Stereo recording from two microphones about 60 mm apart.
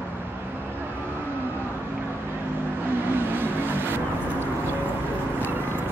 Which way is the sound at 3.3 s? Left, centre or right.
Right.